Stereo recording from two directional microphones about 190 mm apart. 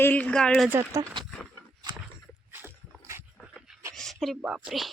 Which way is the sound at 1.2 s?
5° left (ahead or behind).